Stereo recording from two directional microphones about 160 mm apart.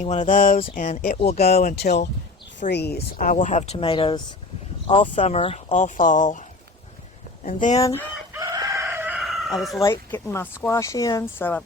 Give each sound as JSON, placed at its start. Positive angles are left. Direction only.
{"t": 0.0, "sound": "speech", "side_deg": 45}
{"t": 1.6, "sound": "speech", "side_deg": 90}
{"t": 3.4, "sound": "speech", "side_deg": 45}
{"t": 7.4, "sound": "speech", "side_deg": 45}
{"t": 7.8, "sound": "chicken", "side_deg": 20}
{"t": 8.3, "sound": "chicken", "side_deg": -25}
{"t": 9.6, "sound": "speech", "side_deg": 0}
{"t": 9.8, "sound": "speech", "side_deg": 15}